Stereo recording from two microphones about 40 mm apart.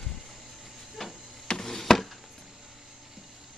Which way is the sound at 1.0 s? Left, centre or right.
Centre.